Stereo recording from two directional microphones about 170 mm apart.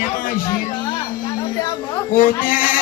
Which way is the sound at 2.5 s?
55° left (ahead or behind).